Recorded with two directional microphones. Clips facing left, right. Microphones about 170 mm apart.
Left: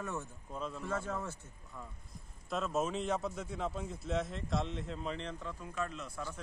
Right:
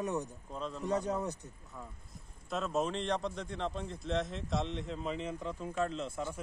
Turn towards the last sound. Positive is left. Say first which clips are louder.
# right 5 dB
turn(degrees=-30)  # may be behind; listen again after turning